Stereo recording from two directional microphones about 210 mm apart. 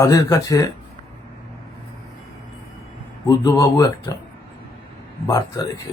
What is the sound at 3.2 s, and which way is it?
Speech, 15° left (ahead or behind).